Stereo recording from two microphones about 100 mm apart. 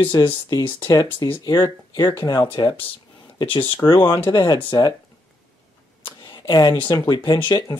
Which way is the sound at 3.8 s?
10° left (ahead or behind).